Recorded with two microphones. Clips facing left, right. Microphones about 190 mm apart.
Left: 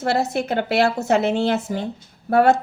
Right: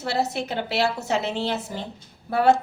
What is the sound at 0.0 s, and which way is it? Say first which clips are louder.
A woman's voice: left 4 dB; 50° left (ahead or behind).